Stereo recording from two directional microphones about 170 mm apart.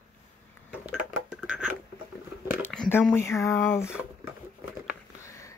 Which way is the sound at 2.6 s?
10° left (ahead or behind).